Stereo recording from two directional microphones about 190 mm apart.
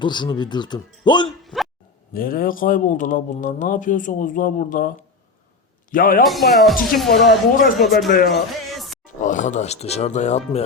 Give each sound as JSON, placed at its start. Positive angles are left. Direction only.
{"t": 0.0, "sound": "speech", "side_deg": 25}
{"t": 1.5, "sound": "a sound", "side_deg": 5}
{"t": 2.1, "sound": "a man's voice", "side_deg": 50}
{"t": 6.2, "sound": "speech", "side_deg": 0}
{"t": 7.1, "sound": "speech", "side_deg": 55}
{"t": 8.3, "sound": "music", "side_deg": 0}
{"t": 9.2, "sound": "speech", "side_deg": 40}